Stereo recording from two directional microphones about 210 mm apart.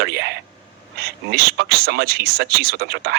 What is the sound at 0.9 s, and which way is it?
Speech, 50° right (ahead or behind).